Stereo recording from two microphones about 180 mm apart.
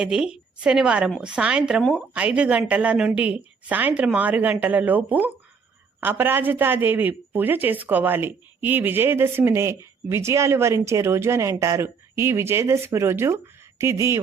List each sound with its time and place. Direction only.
0.0 s a woman's voice: 5° right (ahead or behind)